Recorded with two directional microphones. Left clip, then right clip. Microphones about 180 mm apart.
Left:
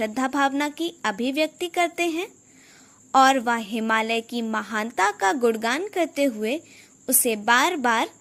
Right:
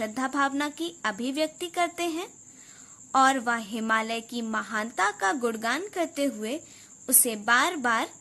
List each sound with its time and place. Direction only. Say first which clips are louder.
0.0 s a woman's voice: left 4 dB; 20° left (ahead or behind)